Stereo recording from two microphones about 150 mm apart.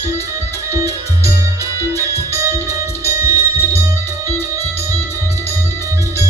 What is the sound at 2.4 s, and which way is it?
Music, 20° right (ahead or behind).